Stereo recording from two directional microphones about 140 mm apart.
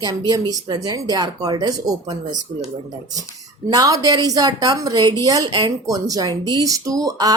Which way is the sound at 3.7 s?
25° right (ahead or behind).